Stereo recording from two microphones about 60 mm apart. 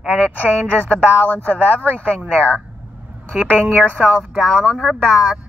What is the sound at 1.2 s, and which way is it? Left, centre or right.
Speech, left.